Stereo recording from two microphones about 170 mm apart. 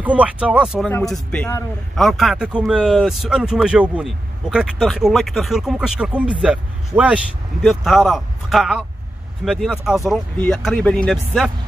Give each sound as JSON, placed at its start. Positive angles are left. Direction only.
{"t": 0.0, "sound": "speech", "side_deg": -10}